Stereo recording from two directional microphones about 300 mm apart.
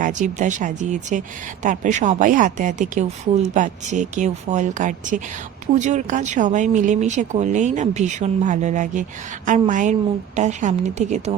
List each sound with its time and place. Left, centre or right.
0.0 s a woman's voice: right